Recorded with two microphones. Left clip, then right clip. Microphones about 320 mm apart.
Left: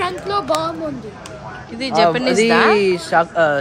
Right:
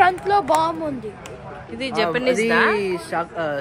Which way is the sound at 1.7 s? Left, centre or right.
Centre.